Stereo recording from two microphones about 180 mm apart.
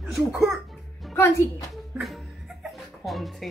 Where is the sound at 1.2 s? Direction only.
15° left (ahead or behind).